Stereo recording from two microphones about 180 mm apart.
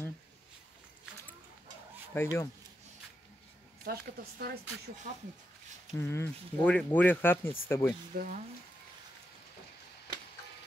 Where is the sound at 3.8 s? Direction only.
60° right (ahead or behind).